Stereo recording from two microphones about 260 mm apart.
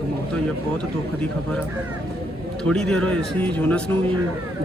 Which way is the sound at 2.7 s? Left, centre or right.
Centre.